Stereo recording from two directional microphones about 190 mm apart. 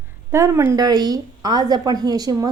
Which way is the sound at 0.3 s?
15° right (ahead or behind).